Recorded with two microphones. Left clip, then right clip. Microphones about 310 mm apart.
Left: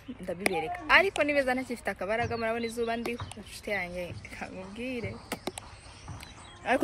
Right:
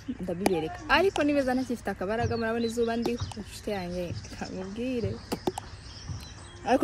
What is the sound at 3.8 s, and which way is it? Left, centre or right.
Speech, centre.